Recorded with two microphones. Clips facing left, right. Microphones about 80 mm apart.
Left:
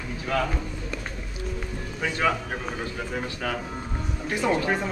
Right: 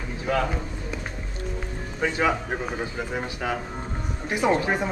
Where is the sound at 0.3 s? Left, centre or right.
Centre.